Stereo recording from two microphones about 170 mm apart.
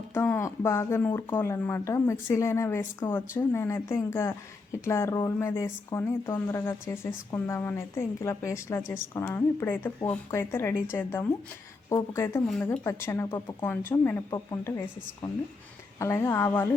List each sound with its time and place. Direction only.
0.1 s speech: 15° left (ahead or behind)